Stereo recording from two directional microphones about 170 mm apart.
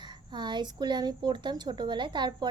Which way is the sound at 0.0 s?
25° right (ahead or behind).